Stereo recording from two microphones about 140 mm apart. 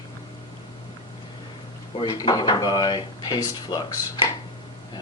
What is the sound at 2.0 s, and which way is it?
Speech, 30° left (ahead or behind).